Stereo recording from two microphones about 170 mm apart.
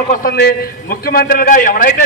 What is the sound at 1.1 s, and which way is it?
Speech, 60° left (ahead or behind).